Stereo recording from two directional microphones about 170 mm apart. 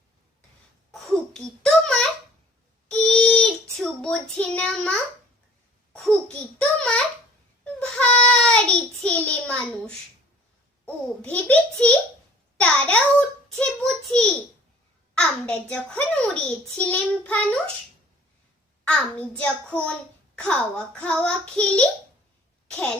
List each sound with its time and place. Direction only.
0.9 s a sound: 5° left (ahead or behind)
2.9 s child singing: 5° left (ahead or behind)
5.9 s a child's voice: 5° left (ahead or behind)
7.6 s child singing: 5° left (ahead or behind)
10.8 s a child's voice: 10° left (ahead or behind)
18.9 s a child's voice: 5° left (ahead or behind)